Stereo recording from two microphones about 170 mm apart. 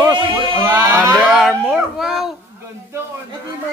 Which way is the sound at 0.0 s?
30° right (ahead or behind).